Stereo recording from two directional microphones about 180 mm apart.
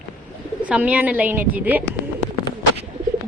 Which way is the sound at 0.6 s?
5° right (ahead or behind).